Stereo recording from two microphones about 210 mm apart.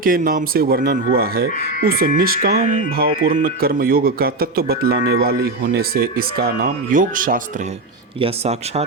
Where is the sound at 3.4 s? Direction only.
45° right (ahead or behind).